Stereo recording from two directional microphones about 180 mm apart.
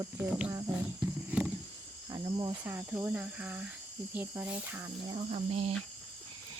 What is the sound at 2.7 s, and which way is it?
Speech, 15° right (ahead or behind).